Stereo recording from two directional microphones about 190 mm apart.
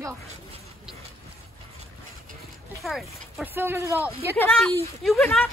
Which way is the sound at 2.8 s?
Centre (ahead or behind).